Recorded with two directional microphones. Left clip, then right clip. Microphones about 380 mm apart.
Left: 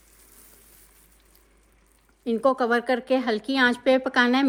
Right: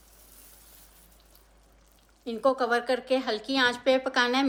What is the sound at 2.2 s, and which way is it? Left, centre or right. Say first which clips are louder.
A woman's voice: left 3 dB; centre.